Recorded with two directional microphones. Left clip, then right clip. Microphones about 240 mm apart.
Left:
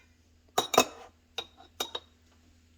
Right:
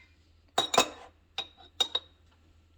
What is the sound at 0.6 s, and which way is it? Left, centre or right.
Cutlery, left.